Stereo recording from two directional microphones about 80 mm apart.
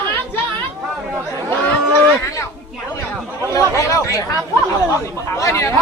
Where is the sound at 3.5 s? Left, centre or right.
Left.